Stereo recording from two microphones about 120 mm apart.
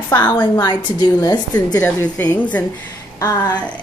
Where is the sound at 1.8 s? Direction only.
10° left (ahead or behind).